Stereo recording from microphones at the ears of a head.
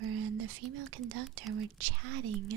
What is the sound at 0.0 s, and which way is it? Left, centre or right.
Speech, right.